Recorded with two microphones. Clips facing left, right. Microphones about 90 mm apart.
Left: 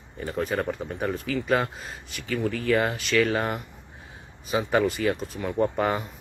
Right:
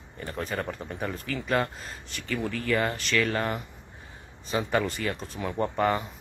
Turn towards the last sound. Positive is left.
turn(degrees=5)  # may be behind; listen again after turning